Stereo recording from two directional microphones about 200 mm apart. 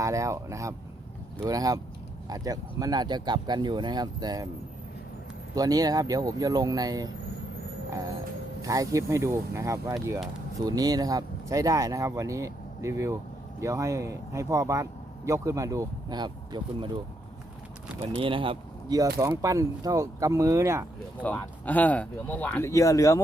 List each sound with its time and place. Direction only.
0.0 s speech: 15° right (ahead or behind)
5.5 s speech: 20° right (ahead or behind)
8.6 s speech: 15° right (ahead or behind)
18.0 s speech: 30° right (ahead or behind)
21.2 s speech: 10° left (ahead or behind)